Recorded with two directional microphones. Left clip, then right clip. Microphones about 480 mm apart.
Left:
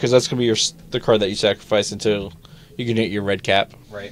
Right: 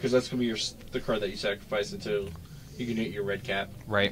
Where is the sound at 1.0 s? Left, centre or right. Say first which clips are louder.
Left 13 dB; left.